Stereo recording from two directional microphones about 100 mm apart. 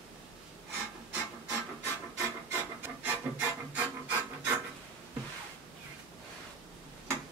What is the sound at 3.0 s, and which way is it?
Wood, 15° right (ahead or behind).